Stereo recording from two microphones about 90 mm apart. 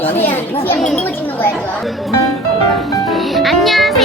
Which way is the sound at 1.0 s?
25° left (ahead or behind).